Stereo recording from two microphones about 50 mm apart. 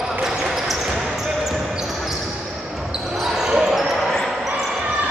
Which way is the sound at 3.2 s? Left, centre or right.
Centre.